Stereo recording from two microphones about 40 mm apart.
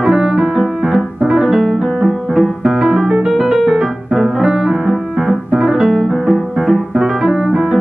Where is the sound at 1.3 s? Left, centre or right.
Centre.